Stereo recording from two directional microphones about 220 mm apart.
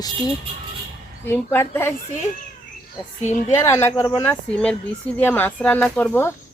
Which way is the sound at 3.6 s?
10° left (ahead or behind).